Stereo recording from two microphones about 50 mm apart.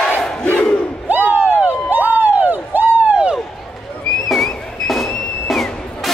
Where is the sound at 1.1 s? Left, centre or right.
Right.